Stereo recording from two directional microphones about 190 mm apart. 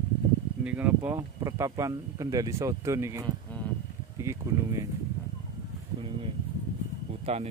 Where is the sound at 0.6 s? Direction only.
10° right (ahead or behind).